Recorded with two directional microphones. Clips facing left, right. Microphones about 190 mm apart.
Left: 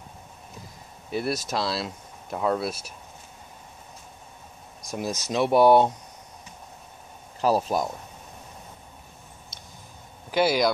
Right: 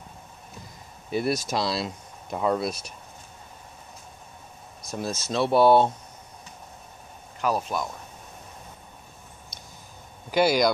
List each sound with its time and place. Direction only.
1.1 s speech: centre (ahead or behind)
4.8 s speech: 15° left (ahead or behind)
7.3 s speech: 35° left (ahead or behind)
10.3 s speech: 5° left (ahead or behind)